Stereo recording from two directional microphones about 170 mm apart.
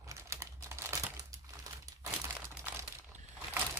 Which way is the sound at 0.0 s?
20° right (ahead or behind).